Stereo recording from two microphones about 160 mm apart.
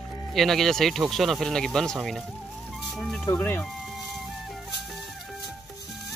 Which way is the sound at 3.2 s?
15° left (ahead or behind).